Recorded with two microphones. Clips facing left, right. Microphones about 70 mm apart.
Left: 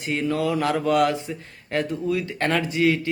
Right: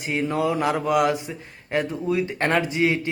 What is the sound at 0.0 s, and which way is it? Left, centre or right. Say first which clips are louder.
A man's voice: even; centre.